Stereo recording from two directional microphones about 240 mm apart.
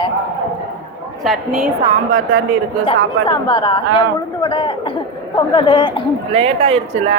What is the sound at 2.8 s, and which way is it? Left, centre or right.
Speech, centre.